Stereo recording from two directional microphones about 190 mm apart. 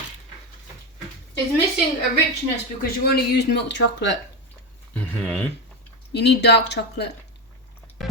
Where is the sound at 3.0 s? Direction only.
55° left (ahead or behind).